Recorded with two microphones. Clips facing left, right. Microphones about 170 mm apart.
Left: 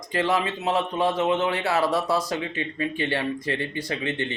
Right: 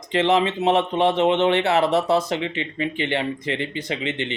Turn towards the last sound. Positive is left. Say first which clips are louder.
# right 1 dB
turn(degrees=-20)  # may be behind; listen again after turning